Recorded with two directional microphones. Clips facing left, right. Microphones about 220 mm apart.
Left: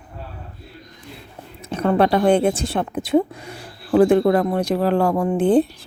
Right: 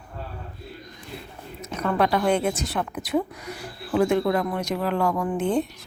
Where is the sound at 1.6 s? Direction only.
30° left (ahead or behind).